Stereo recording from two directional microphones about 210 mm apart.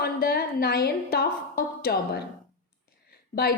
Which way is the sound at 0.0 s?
45° left (ahead or behind).